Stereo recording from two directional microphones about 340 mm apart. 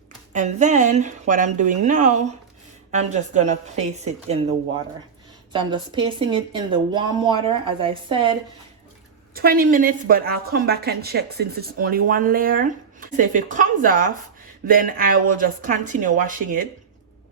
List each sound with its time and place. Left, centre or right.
0.3 s a woman's voice: right
5.5 s speech: centre
9.3 s a woman's voice: right